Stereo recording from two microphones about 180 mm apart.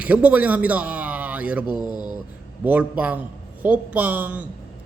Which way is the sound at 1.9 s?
20° left (ahead or behind).